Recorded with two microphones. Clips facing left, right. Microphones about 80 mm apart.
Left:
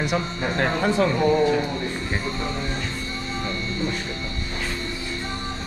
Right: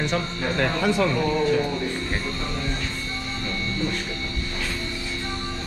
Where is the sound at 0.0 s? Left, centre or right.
Centre.